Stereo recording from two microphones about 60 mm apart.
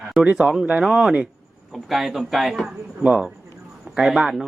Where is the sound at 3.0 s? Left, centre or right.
Right.